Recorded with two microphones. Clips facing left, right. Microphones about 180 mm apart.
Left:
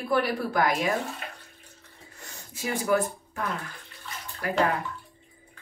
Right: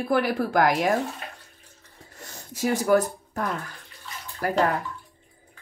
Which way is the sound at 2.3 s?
40° right (ahead or behind).